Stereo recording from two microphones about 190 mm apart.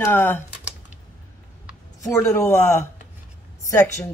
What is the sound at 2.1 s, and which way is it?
Speech, 15° left (ahead or behind).